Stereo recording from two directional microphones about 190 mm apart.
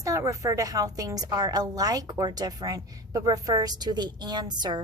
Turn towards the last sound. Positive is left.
turn(degrees=-20)  # may be behind; listen again after turning